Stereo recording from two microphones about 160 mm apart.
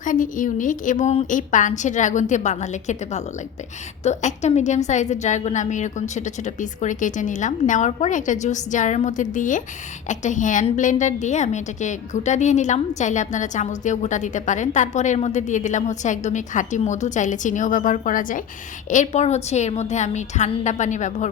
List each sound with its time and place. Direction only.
0.0 s a woman's voice: 55° left (ahead or behind)